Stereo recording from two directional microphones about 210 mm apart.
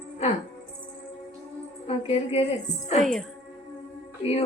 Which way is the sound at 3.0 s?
Centre (ahead or behind).